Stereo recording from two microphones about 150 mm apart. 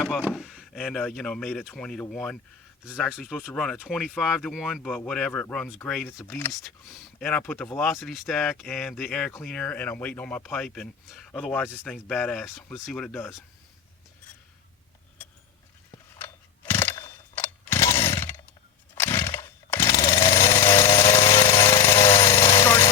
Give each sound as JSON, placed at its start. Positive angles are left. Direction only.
{"t": 0.2, "sound": "a sound", "side_deg": -5}
{"t": 0.5, "sound": "speech", "side_deg": 5}
{"t": 6.5, "sound": "speech", "side_deg": 0}
{"t": 16.1, "sound": "mechanisms", "side_deg": 15}
{"t": 16.9, "sound": "chainsaw", "side_deg": 20}
{"t": 20.9, "sound": "jackhammer", "side_deg": 35}
{"t": 21.6, "sound": "jackhammer", "side_deg": 20}
{"t": 22.1, "sound": "jackhammer", "side_deg": 35}
{"t": 22.5, "sound": "a sound", "side_deg": 15}